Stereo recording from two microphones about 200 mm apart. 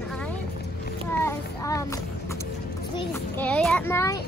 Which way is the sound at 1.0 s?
15° left (ahead or behind).